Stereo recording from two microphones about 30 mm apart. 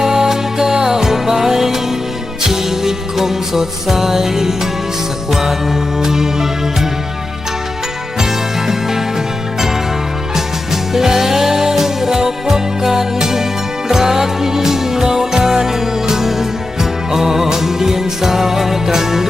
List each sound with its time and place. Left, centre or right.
0.0 s music: centre
8.2 s music: centre
10.9 s music: centre